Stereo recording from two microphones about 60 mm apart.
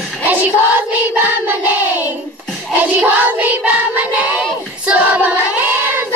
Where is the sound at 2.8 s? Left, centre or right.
Right.